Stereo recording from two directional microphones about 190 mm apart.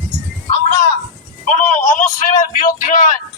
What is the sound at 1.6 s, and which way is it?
A man's voice, 40° left (ahead or behind).